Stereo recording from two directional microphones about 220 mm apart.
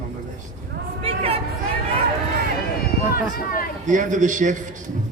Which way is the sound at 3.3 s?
40° left (ahead or behind).